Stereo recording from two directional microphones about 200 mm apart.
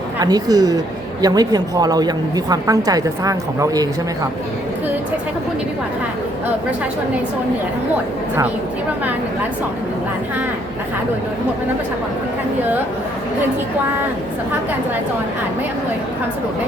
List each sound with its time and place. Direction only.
0.2 s a woman's voice: 20° right (ahead or behind)